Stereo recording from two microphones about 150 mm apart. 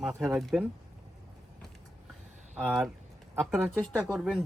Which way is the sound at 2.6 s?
5° right (ahead or behind).